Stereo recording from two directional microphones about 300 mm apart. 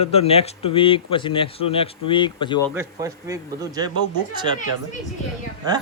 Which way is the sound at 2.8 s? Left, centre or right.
Centre.